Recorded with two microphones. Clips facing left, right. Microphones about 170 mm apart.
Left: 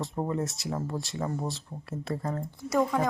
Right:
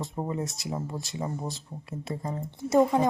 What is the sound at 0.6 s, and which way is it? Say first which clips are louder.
A woman's voice: left 1 dB; 15° right (ahead or behind).